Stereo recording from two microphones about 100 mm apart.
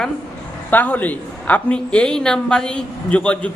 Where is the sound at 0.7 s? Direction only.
15° left (ahead or behind).